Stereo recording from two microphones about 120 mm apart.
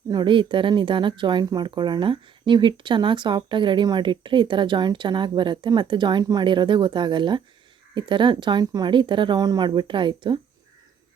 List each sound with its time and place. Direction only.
0.1 s speech: 40° right (ahead or behind)